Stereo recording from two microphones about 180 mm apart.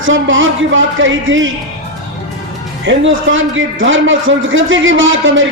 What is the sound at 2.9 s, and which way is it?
A man's voice, 90° right.